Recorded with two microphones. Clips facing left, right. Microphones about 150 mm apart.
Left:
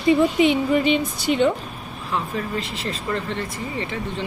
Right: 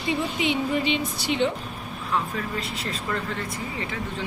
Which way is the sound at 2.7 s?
Centre (ahead or behind).